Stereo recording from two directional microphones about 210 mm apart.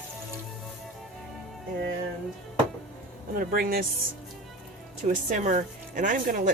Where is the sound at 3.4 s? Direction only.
45° right (ahead or behind).